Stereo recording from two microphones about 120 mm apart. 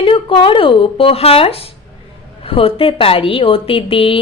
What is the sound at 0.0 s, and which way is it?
A woman's voice, 45° left (ahead or behind).